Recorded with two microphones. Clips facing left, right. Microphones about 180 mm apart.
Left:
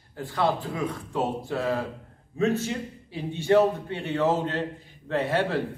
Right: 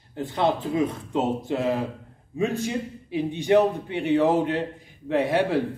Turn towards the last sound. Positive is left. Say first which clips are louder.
# right 3 dB
turn(degrees=-15)  # may be behind; listen again after turning